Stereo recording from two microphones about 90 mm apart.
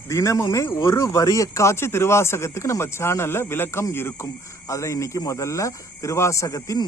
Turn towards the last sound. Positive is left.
turn(degrees=35)  # may be behind; listen again after turning